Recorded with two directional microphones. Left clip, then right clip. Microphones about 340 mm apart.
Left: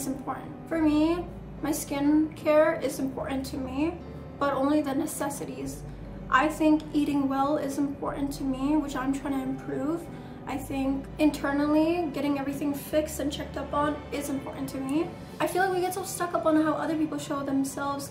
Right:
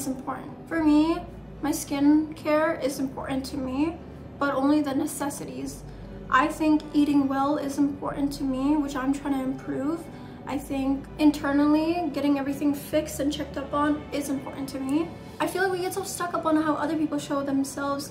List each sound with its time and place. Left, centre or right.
0.7 s a woman's voice: centre
14.1 s a woman's voice: centre